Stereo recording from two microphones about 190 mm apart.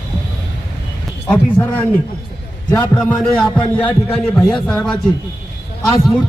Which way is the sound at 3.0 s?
Centre (ahead or behind).